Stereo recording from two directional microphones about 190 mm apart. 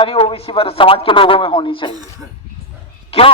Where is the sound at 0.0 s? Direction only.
30° left (ahead or behind).